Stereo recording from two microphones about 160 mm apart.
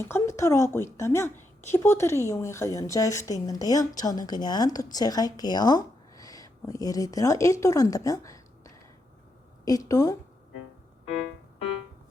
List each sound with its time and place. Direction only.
0.0 s a woman's voice: 15° left (ahead or behind)